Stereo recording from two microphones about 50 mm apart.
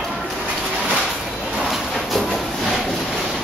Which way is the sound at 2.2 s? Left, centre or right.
Centre.